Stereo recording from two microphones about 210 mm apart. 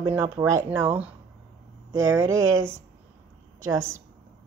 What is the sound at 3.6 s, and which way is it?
Speech, 70° right (ahead or behind).